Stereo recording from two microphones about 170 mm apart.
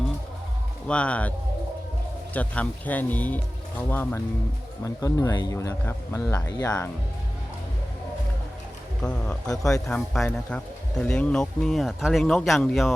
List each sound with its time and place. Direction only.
0.9 s speech: 5° left (ahead or behind)
2.3 s speech: 10° left (ahead or behind)
9.0 s speech: 5° left (ahead or behind)